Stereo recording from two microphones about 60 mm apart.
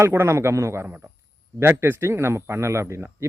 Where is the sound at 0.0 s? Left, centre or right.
Right.